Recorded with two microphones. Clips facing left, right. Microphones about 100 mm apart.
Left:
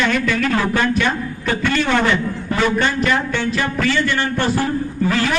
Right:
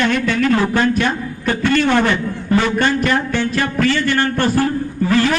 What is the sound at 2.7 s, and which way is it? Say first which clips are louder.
A man's voice: right 2 dB; 45° right (ahead or behind).